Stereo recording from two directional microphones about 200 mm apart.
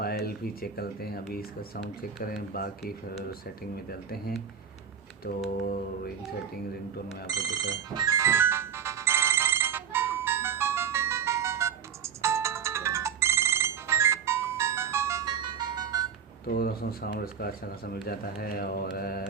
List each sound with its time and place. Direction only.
0.6 s speech: 50° left (ahead or behind)
3.8 s speech: 50° left (ahead or behind)
7.3 s ringtone: 20° right (ahead or behind)
16.5 s speech: 50° left (ahead or behind)